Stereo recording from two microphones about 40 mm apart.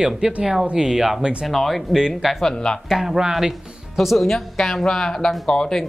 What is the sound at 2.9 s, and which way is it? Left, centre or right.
Speech, centre.